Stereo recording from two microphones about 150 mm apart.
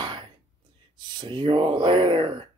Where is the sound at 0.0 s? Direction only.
30° right (ahead or behind).